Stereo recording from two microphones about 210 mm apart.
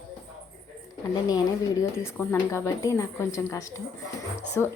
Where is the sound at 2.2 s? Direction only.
10° left (ahead or behind).